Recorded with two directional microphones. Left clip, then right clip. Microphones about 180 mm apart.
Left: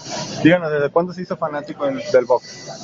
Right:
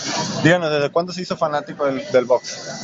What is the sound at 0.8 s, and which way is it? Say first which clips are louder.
A man's voice: left 2 dB; centre (ahead or behind).